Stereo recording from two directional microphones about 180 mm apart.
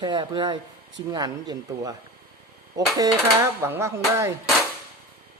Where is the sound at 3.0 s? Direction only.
15° right (ahead or behind).